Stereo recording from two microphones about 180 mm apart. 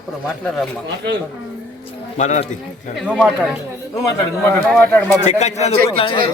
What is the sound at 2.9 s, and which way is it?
Speech, centre (ahead or behind).